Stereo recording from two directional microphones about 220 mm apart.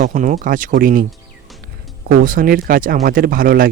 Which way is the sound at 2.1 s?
40° right (ahead or behind).